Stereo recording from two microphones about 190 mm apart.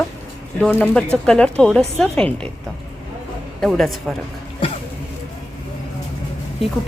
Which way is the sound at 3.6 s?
Centre (ahead or behind).